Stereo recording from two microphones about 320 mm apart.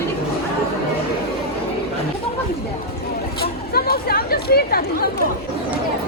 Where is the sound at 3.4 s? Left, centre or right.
Left.